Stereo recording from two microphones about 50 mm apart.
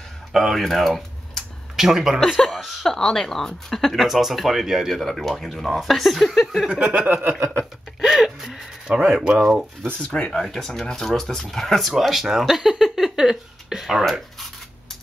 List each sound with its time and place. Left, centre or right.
0.3 s speech: centre
1.8 s speech: centre
2.1 s speech: centre
6.7 s a sound: right
7.1 s a sound: right
8.0 s a sound: centre
8.5 s speech: centre
9.4 s speech: centre
10.0 s speech: centre
10.3 s speech: centre
11.9 s speech: centre